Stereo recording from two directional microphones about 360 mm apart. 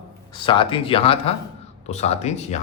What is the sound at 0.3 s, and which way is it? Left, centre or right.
A man's voice, centre.